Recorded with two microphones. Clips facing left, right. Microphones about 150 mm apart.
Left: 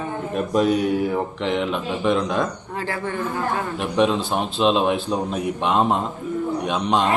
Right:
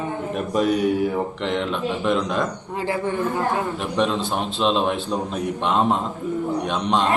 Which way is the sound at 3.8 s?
5° left (ahead or behind).